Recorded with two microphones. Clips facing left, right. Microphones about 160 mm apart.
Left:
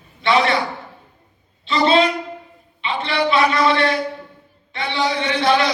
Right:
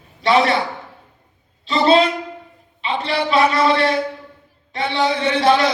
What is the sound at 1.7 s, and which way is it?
A man's voice, 40° right (ahead or behind).